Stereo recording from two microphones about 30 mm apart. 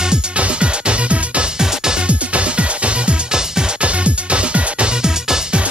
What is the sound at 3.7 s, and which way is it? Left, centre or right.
Music, right.